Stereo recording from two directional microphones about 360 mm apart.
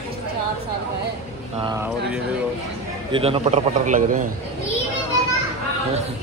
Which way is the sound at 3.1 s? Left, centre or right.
Centre.